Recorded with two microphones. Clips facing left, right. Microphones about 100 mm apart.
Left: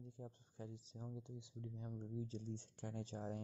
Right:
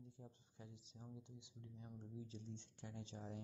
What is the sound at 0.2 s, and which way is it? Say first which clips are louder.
Speech: left 7 dB; 45° left (ahead or behind).